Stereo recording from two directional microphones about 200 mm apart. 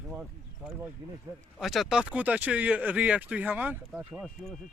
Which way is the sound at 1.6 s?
Centre (ahead or behind).